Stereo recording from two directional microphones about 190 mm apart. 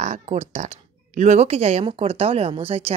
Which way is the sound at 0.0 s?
35° right (ahead or behind).